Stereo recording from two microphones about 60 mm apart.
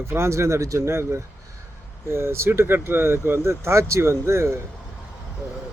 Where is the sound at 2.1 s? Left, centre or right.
Right.